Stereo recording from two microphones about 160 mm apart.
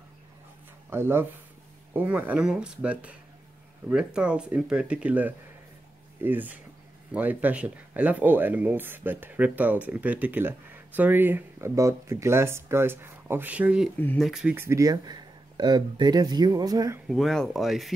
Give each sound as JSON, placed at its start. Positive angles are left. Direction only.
{"t": 0.8, "sound": "speech", "side_deg": -15}
{"t": 13.9, "sound": "speech", "side_deg": 10}
{"t": 14.2, "sound": "speech", "side_deg": -5}
{"t": 17.1, "sound": "speech", "side_deg": 0}